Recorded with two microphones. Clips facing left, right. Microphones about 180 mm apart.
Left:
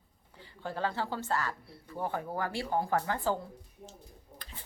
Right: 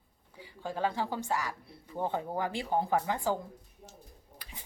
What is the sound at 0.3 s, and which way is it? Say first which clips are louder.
Speech: right 1 dB; 10° right (ahead or behind).